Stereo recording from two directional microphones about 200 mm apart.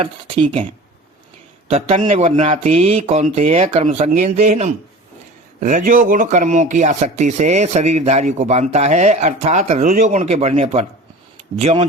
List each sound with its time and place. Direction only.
0.0 s speech: 30° right (ahead or behind)
1.7 s speech: 30° right (ahead or behind)